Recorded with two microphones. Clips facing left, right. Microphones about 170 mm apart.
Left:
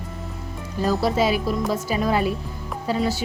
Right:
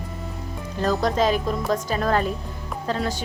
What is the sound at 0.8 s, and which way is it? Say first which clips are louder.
A woman's voice: left 1 dB; 5° left (ahead or behind).